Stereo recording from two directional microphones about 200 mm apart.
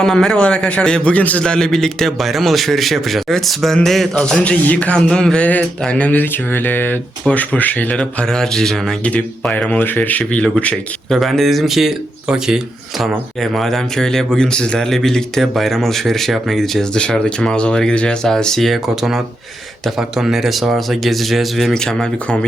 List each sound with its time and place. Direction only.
0.0 s a man's voice: centre (ahead or behind)